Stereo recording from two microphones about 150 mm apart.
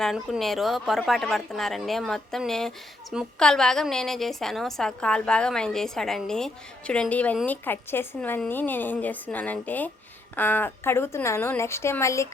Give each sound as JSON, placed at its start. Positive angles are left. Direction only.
{"t": 0.0, "sound": "a woman's voice", "side_deg": 0}